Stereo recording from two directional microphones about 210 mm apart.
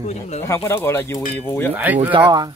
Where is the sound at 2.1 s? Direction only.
20° right (ahead or behind).